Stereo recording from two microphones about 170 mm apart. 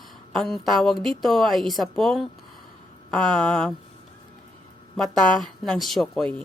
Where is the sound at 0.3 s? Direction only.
Centre (ahead or behind).